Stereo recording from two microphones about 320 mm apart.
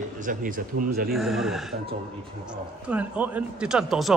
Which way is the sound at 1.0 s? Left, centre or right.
Centre.